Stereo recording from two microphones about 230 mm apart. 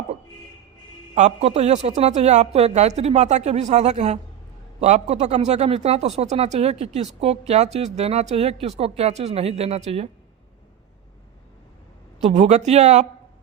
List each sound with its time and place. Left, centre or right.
1.1 s speech: right
12.2 s speech: right